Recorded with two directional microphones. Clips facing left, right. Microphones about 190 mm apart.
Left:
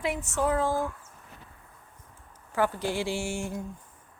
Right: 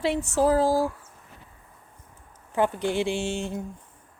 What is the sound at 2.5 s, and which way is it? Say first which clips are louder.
A woman's voice: right 3 dB; 20° right (ahead or behind).